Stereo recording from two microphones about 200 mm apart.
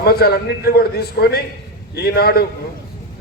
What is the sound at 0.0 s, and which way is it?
A man's voice, 50° left (ahead or behind).